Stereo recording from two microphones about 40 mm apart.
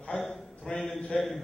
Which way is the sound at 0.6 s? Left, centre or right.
Left.